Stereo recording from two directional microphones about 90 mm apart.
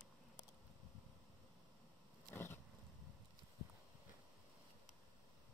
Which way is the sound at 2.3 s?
25° left (ahead or behind).